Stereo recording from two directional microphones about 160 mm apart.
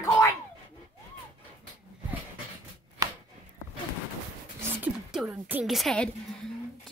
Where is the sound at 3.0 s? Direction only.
25° right (ahead or behind).